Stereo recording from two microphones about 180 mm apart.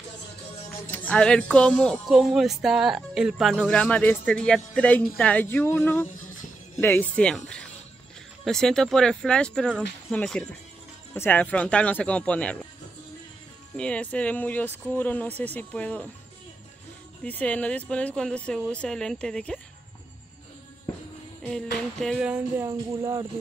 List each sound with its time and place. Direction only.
0.9 s speech: 5° left (ahead or behind)
13.7 s speech: 5° left (ahead or behind)
17.2 s speech: 10° left (ahead or behind)
21.5 s speech: 5° left (ahead or behind)
22.7 s speech: 20° right (ahead or behind)